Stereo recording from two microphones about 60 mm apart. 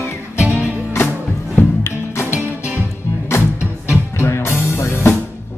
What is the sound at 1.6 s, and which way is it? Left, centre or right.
Music, left.